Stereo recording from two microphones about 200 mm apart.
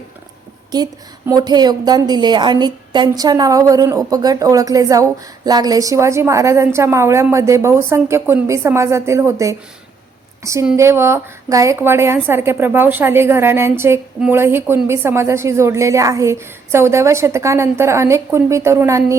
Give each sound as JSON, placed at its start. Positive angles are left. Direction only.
{"t": 1.3, "sound": "a woman's voice", "side_deg": -20}